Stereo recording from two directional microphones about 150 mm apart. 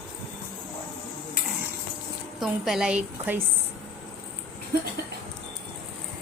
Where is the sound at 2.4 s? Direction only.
Centre (ahead or behind).